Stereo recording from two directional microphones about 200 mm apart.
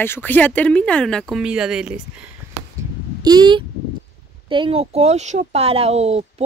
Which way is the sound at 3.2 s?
20° right (ahead or behind).